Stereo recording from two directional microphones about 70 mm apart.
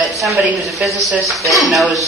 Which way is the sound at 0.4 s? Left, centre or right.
Centre.